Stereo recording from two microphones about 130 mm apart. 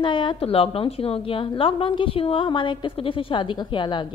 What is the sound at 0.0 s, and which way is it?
A woman's voice, 40° left (ahead or behind).